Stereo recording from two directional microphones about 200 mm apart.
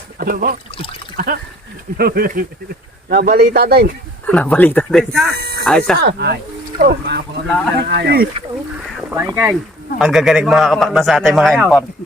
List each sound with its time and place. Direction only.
0.2 s speech: 45° right (ahead or behind)
4.3 s speech: 5° left (ahead or behind)
5.3 s a sound: 50° right (ahead or behind)
5.6 s a man's voice: centre (ahead or behind)
6.0 s speech: 55° right (ahead or behind)
7.4 s a man's voice: 5° left (ahead or behind)
7.8 s speech: 55° right (ahead or behind)
9.0 s a man's voice: 10° right (ahead or behind)